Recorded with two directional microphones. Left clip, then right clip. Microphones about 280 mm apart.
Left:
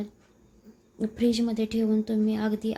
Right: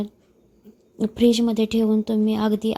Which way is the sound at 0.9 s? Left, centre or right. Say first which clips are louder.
Right 7 dB; right.